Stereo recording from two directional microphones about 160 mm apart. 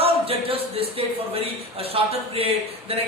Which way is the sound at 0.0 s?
35° right (ahead or behind).